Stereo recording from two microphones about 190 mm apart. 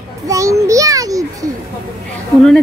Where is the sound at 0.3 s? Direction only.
15° right (ahead or behind).